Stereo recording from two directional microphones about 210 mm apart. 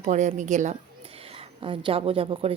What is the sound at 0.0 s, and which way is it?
A woman's voice, 35° right (ahead or behind).